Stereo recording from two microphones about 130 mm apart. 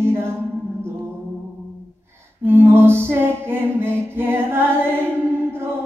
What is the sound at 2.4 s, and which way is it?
Music, 20° right (ahead or behind).